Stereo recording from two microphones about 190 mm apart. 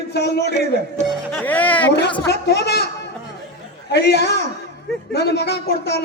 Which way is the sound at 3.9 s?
60° left (ahead or behind).